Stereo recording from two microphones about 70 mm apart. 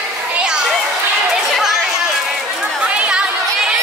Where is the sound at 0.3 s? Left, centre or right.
Centre.